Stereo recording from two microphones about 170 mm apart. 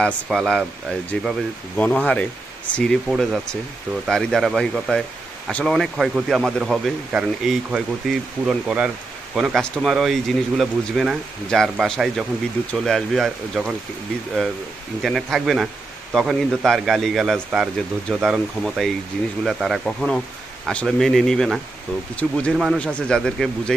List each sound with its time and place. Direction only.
0.0 s speech: centre (ahead or behind)
1.8 s speech: 10° left (ahead or behind)
15.0 s speech: centre (ahead or behind)